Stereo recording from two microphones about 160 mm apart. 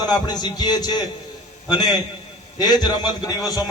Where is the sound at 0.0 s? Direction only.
25° left (ahead or behind).